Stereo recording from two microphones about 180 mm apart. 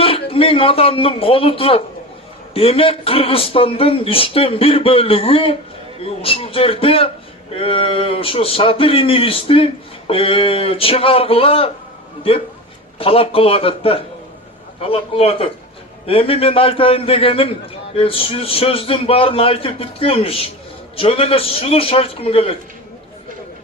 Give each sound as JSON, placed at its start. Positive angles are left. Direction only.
{"t": 0.0, "sound": "a man's voice", "side_deg": 30}
{"t": 13.0, "sound": "speech", "side_deg": 30}